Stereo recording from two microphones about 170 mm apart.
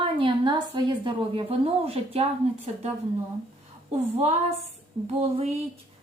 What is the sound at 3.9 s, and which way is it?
A woman's voice, 40° right (ahead or behind).